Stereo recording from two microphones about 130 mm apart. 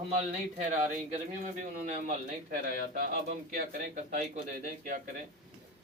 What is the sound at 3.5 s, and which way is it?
A man's voice, 90° right.